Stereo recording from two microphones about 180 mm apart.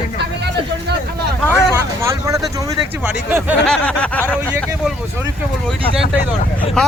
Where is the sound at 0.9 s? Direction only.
65° right (ahead or behind).